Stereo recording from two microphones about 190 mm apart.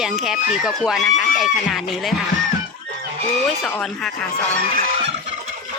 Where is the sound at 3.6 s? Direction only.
5° left (ahead or behind).